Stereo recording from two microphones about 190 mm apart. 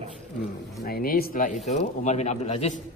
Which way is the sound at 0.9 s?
50° left (ahead or behind).